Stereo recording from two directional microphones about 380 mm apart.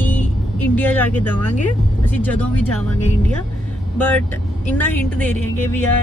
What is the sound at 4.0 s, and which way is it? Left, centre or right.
Speech, centre.